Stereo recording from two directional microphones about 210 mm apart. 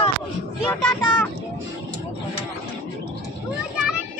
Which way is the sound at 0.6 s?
10° left (ahead or behind).